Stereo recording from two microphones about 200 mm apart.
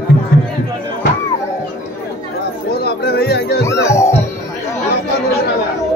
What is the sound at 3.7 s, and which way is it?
Music, 15° left (ahead or behind).